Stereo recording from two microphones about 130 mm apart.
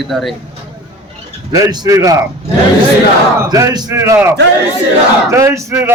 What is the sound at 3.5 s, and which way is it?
Speech, 30° right (ahead or behind).